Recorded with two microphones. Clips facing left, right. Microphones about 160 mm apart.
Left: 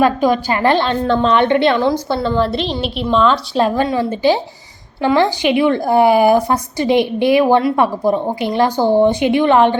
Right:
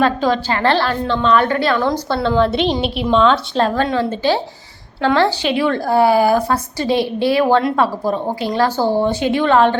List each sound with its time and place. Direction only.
0.0 s a woman's voice: 15° left (ahead or behind)
1.0 s a woman's voice: 45° left (ahead or behind)
1.3 s a woman's voice: 25° left (ahead or behind)
1.8 s a woman's voice: 15° left (ahead or behind)
2.2 s a woman's voice: centre (ahead or behind); by 9.7 s 15° left (ahead or behind)